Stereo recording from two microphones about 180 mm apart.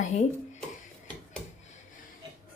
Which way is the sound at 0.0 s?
40° left (ahead or behind).